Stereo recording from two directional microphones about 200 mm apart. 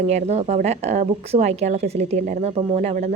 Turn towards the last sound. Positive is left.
turn(degrees=-35)  # may be behind; listen again after turning